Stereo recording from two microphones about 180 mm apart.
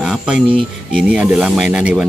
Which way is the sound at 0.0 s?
5° right (ahead or behind).